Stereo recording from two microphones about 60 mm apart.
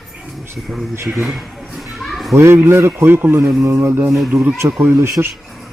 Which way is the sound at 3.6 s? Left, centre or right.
Right.